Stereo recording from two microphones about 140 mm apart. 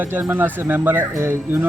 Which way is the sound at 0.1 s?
15° right (ahead or behind).